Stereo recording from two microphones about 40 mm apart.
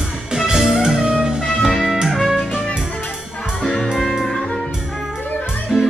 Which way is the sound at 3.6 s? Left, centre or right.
Left.